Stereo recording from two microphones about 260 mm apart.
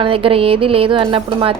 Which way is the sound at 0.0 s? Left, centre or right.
Right.